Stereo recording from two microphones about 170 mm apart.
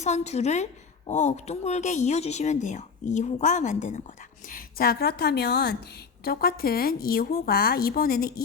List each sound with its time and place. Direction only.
0.0 s a woman's voice: 40° left (ahead or behind)
4.4 s a woman's voice: 60° left (ahead or behind)